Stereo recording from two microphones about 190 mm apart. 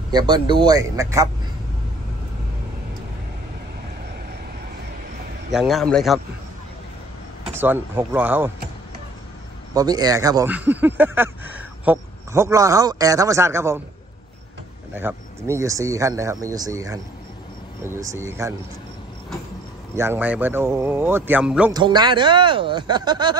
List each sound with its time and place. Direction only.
0.1 s speech: 25° right (ahead or behind)
5.5 s a man's voice: centre (ahead or behind)
7.6 s speech: 10° right (ahead or behind)
9.8 s speech: 20° right (ahead or behind)
15.0 s speech: 10° right (ahead or behind)
20.0 s speech: 10° right (ahead or behind)
21.7 s speech: 20° right (ahead or behind)